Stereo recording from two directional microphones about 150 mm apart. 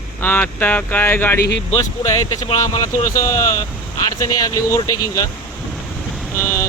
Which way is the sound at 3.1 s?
20° left (ahead or behind).